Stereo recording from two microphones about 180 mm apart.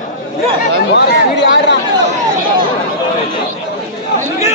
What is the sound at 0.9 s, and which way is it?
Speech, 75° left (ahead or behind).